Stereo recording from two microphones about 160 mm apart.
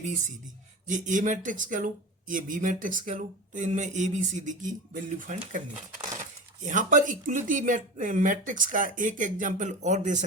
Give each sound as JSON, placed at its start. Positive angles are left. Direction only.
{"t": 0.0, "sound": "speech", "side_deg": -50}
{"t": 6.7, "sound": "speech", "side_deg": -55}